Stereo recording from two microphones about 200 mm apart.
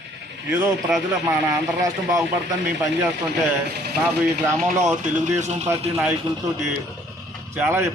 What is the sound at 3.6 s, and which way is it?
Speech, 55° right (ahead or behind).